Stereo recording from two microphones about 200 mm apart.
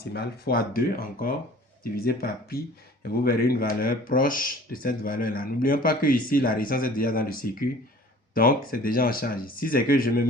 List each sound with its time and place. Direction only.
0.1 s speech: 50° left (ahead or behind)